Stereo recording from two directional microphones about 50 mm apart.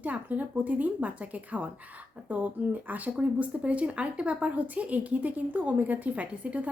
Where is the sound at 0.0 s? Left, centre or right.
Right.